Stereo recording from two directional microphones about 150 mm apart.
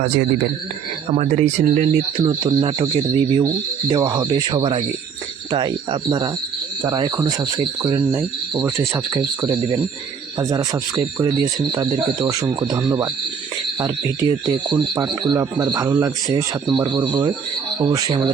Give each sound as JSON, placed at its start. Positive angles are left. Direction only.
{"t": 1.1, "sound": "speech", "side_deg": -45}
{"t": 2.2, "sound": "speech", "side_deg": -25}